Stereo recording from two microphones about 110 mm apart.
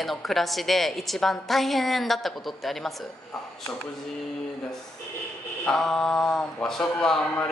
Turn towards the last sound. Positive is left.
turn(degrees=5)  # may be behind; listen again after turning